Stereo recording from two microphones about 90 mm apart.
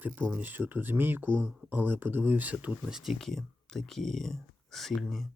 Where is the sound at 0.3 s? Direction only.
20° right (ahead or behind).